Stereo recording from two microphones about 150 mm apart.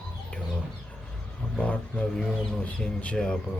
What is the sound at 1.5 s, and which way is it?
Speech, 10° left (ahead or behind).